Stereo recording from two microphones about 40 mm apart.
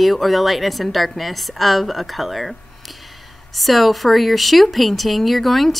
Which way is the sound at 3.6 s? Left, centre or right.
Centre.